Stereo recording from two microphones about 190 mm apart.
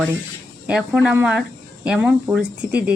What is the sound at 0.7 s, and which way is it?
Speech, 5° right (ahead or behind).